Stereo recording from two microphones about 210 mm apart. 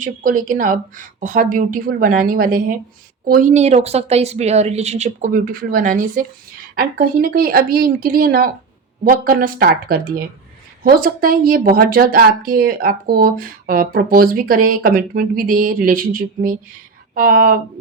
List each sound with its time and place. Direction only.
0.0 s a woman's voice: 40° right (ahead or behind)